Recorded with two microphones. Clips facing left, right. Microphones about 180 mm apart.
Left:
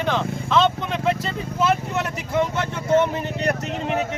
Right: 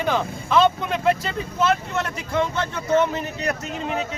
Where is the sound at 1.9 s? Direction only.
15° left (ahead or behind).